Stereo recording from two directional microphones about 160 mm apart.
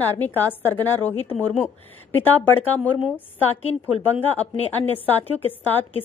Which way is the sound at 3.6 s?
40° left (ahead or behind).